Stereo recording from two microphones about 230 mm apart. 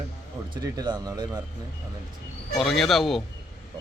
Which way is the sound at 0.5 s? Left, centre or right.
Centre.